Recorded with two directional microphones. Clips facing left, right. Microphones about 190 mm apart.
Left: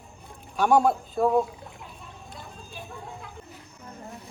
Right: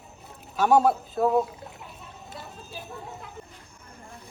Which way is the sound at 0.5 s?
5° right (ahead or behind).